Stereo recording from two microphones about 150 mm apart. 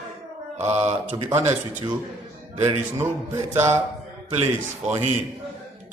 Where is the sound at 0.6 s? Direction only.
50° right (ahead or behind).